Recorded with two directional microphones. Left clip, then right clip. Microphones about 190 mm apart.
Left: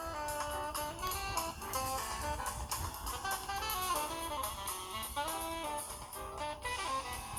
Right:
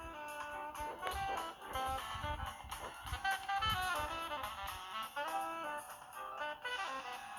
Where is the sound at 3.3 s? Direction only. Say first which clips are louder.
Right 3 dB; 35° right (ahead or behind).